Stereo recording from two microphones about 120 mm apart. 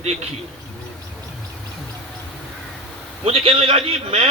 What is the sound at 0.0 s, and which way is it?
Speech, 65° right (ahead or behind).